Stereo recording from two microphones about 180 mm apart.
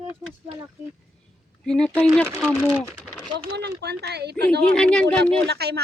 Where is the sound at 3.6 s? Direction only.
65° right (ahead or behind).